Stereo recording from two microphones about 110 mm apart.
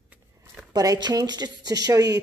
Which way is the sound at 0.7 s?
35° right (ahead or behind).